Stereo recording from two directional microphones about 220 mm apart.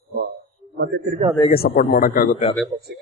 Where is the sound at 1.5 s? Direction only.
40° left (ahead or behind).